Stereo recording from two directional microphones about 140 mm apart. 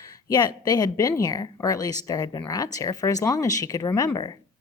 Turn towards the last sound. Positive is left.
turn(degrees=30)  # may be behind; listen again after turning